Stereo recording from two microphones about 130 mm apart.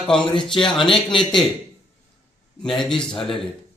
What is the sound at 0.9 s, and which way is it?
Speech, 40° left (ahead or behind).